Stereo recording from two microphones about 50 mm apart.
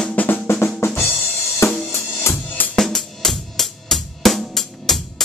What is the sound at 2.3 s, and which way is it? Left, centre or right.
Music, left.